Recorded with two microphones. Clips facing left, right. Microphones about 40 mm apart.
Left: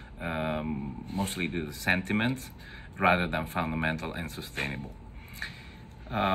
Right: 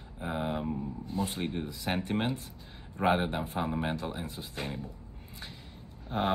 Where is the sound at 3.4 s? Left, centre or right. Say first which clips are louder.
Left 2 dB; left.